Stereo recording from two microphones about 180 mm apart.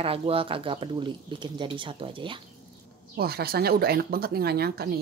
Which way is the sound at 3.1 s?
60° right (ahead or behind).